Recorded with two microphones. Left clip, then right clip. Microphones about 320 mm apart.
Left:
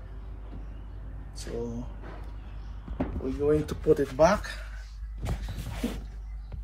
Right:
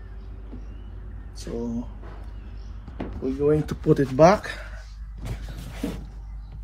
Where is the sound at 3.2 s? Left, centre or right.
Right.